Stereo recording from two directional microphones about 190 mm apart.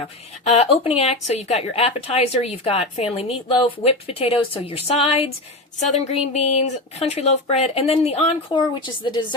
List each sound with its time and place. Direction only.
0.4 s speech: 35° left (ahead or behind)